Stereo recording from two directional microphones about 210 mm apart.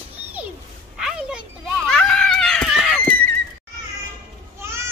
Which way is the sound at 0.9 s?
5° right (ahead or behind).